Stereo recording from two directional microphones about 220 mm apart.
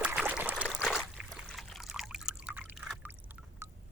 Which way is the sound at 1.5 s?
Centre (ahead or behind).